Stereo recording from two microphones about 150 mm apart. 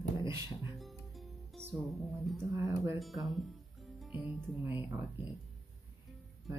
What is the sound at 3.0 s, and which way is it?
Speech, centre (ahead or behind).